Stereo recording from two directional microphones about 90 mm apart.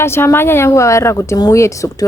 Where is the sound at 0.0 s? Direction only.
30° left (ahead or behind).